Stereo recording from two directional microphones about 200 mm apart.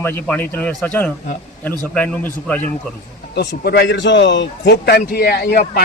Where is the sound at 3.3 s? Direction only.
50° left (ahead or behind).